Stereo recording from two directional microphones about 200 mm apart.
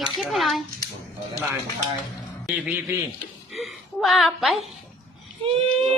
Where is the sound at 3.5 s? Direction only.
Centre (ahead or behind).